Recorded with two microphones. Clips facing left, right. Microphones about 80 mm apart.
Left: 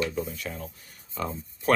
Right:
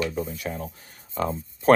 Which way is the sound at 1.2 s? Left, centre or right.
Right.